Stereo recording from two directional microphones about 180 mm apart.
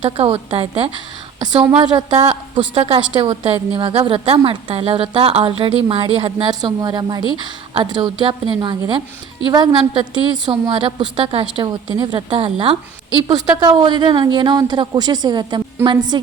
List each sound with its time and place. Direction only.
0.0 s a woman's voice: 30° right (ahead or behind)